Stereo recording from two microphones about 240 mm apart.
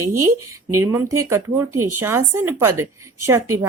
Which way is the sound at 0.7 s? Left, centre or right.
Centre.